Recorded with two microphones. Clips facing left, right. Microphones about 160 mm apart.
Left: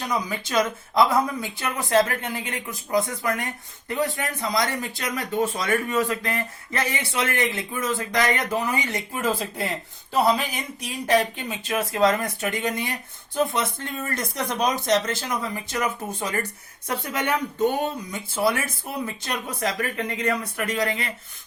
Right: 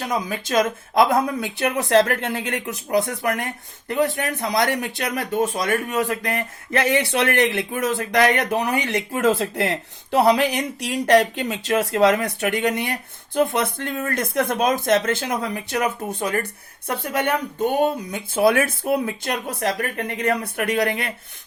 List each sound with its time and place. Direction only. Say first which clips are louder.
0.1 s speech: right 3 dB; 45° right (ahead or behind); by 5.2 s 65° right (ahead or behind)
5.5 s speech: right 1 dB; 40° right (ahead or behind)
6.3 s speech: right 5 dB; 65° right (ahead or behind)